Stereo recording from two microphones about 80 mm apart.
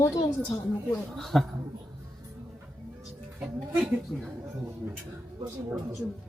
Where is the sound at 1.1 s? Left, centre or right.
Centre.